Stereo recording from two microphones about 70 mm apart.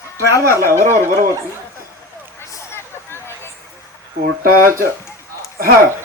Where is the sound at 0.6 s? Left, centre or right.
Right.